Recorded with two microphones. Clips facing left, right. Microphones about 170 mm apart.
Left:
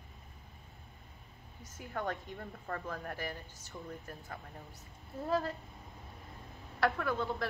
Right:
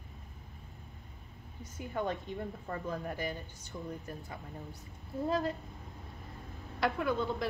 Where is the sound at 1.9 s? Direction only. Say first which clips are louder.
Right 3 dB; 15° right (ahead or behind).